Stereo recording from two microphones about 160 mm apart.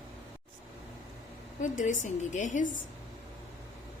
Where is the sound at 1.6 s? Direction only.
50° left (ahead or behind).